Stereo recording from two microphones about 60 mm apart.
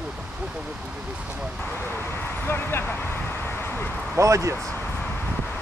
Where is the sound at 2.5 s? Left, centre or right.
Left.